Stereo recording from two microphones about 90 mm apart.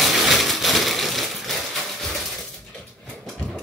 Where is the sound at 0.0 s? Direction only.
Centre (ahead or behind).